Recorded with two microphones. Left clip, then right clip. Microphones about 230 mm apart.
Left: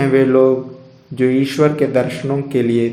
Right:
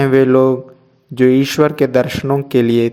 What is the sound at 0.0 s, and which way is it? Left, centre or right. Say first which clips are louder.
Speech: right 1 dB; right.